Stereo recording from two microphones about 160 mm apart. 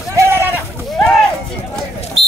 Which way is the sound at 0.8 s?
Centre (ahead or behind).